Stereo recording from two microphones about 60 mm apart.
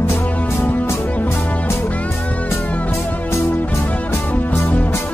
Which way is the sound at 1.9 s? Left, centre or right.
Left.